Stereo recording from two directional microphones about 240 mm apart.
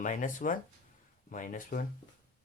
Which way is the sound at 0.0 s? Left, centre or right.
Left.